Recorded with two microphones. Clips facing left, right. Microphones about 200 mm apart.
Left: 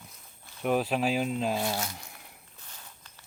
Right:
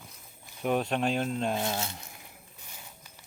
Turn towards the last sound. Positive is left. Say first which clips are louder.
# right 2 dB
turn(degrees=-10)  # may be behind; listen again after turning